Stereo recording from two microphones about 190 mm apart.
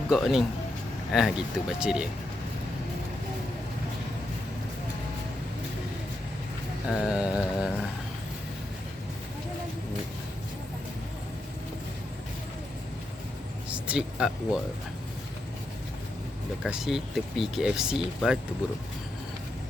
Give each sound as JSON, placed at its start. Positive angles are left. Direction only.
{"t": 0.1, "sound": "speech", "side_deg": 0}
{"t": 7.0, "sound": "mantra", "side_deg": -5}
{"t": 13.7, "sound": "speech", "side_deg": -5}
{"t": 16.6, "sound": "speech", "side_deg": -5}